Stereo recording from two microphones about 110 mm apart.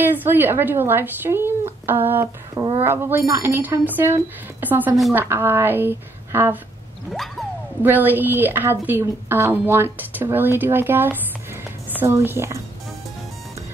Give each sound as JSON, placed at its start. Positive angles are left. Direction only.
{"t": 0.0, "sound": "a woman's voice", "side_deg": -15}
{"t": 7.8, "sound": "a woman's voice", "side_deg": -15}